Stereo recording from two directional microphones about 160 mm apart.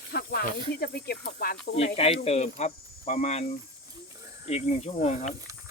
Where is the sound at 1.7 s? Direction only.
40° left (ahead or behind).